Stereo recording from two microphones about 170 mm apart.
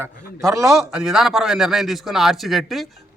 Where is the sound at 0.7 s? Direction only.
Centre (ahead or behind).